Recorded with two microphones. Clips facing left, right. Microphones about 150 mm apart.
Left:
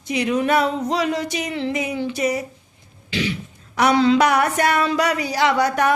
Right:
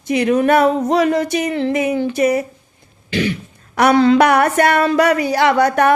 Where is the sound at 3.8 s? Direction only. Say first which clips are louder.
Right 4 dB; 55° right (ahead or behind).